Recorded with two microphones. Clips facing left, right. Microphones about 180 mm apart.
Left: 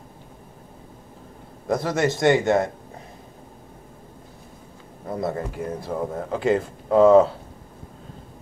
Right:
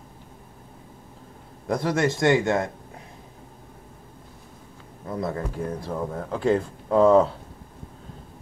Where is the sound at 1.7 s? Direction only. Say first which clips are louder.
Left 1 dB; 5° left (ahead or behind).